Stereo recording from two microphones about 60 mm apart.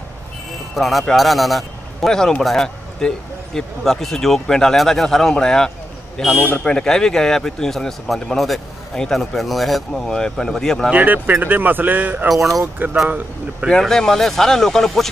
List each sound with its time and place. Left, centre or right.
0.7 s a man's voice: centre
10.9 s speech: right
12.3 s speech: centre
12.8 s speech: right
13.7 s a man's voice: centre